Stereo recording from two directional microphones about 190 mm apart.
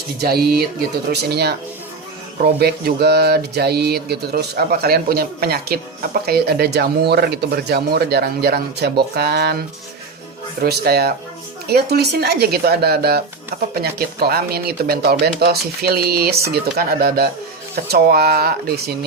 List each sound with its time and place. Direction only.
0.2 s speech: 55° right (ahead or behind)